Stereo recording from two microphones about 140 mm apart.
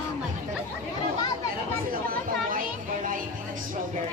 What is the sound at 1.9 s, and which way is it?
Children playing, 85° right.